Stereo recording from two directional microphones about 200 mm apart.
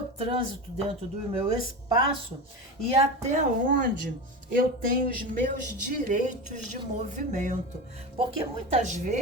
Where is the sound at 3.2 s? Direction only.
35° right (ahead or behind).